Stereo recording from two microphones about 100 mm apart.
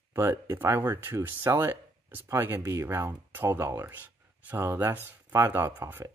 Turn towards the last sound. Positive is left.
turn(degrees=-25)  # may be behind; listen again after turning